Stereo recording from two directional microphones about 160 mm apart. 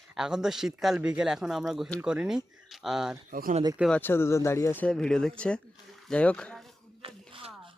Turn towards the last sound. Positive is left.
turn(degrees=-35)  # may be behind; listen again after turning